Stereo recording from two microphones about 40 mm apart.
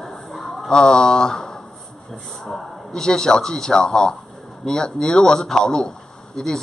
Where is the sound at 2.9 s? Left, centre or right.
Centre.